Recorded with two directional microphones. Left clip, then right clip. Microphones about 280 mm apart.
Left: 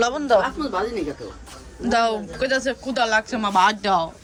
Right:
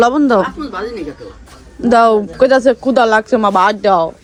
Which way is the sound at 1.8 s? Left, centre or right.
Centre.